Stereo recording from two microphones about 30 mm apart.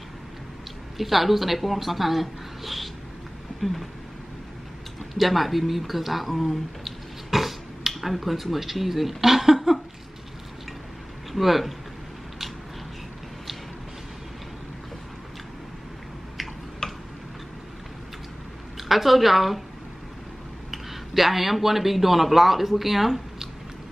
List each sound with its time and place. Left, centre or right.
0.9 s speech: centre
5.1 s speech: centre
11.3 s speech: centre
16.8 s tick-tock: left
18.8 s a woman's voice: centre
20.7 s speech: centre